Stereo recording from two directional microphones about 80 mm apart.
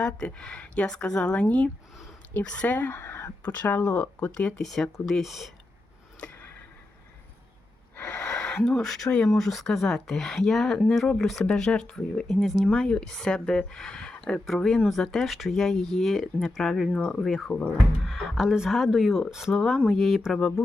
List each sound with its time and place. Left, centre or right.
0.0 s speech: centre; by 3.2 s left
3.4 s speech: centre
6.1 s a sound: centre
7.9 s gasp: left
8.3 s speech: centre
16.9 s speech: centre